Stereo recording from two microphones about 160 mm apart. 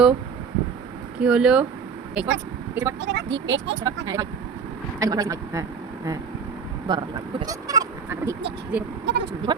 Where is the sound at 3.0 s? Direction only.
90° right.